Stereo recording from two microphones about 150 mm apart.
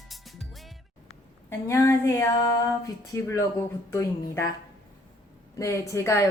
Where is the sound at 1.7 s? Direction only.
20° left (ahead or behind).